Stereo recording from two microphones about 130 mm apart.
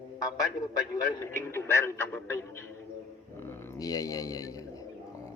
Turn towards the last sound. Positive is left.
turn(degrees=25)  # may be behind; listen again after turning